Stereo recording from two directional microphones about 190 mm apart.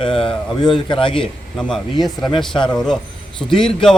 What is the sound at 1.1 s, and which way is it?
A man's voice, 5° left (ahead or behind).